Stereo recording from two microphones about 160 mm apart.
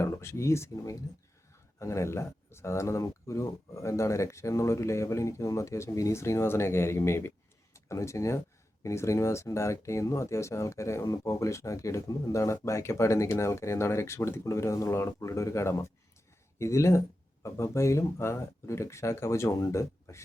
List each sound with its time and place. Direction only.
0.0 s speech: 15° left (ahead or behind)